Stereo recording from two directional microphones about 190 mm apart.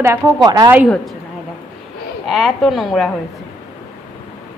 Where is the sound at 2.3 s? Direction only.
Centre (ahead or behind).